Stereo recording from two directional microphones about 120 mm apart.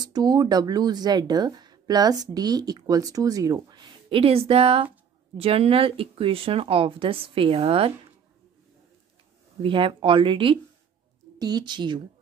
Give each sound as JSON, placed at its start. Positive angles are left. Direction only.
{"t": 0.0, "sound": "speech", "side_deg": -35}
{"t": 4.1, "sound": "speech", "side_deg": -55}
{"t": 9.6, "sound": "speech", "side_deg": -45}
{"t": 11.3, "sound": "speech", "side_deg": -35}